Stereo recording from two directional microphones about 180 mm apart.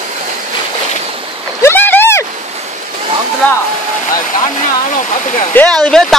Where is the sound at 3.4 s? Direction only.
10° left (ahead or behind).